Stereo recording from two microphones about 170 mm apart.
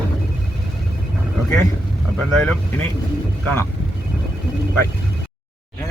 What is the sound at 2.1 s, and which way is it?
Speech, 5° left (ahead or behind).